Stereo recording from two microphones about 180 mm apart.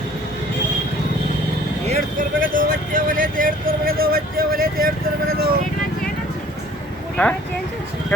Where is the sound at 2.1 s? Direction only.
50° right (ahead or behind).